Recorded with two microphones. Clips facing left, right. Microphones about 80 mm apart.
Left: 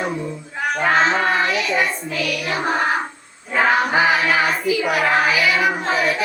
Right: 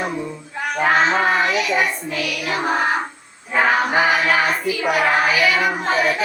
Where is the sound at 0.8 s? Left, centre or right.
Centre.